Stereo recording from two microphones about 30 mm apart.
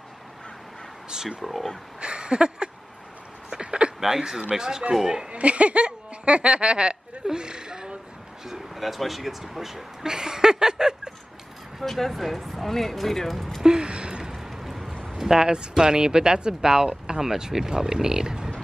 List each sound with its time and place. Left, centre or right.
1.4 s speech: centre
2.0 s a sound: right
4.2 s speech: right
5.3 s speech: right
8.7 s speech: centre
10.0 s speech: right
11.8 s speech: centre
13.7 s a sound: right
14.3 s a sound: centre
15.1 s speech: right